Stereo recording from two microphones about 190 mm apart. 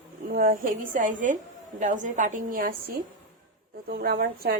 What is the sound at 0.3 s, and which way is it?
A woman's voice, 45° right (ahead or behind).